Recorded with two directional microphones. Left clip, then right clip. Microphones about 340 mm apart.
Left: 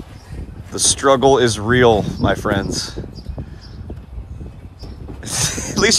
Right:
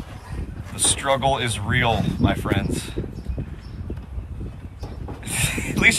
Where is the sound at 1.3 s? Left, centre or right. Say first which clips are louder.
Left 9 dB; centre.